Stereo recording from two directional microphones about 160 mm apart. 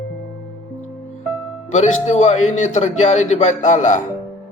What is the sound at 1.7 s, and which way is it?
A man's voice, 45° left (ahead or behind).